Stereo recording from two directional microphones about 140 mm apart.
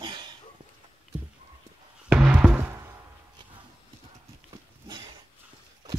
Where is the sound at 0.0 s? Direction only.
30° right (ahead or behind).